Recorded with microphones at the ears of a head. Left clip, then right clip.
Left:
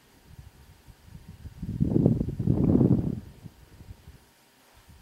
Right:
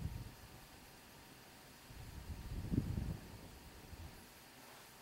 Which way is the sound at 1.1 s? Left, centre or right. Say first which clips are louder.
Left 3 dB; left.